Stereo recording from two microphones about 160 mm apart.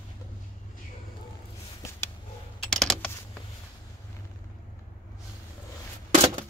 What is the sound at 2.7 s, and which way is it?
Typing, 5° left (ahead or behind).